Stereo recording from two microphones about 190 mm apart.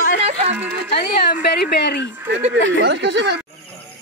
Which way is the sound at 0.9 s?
60° left (ahead or behind).